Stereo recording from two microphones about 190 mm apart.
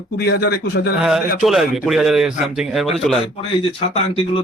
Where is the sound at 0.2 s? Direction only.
55° left (ahead or behind).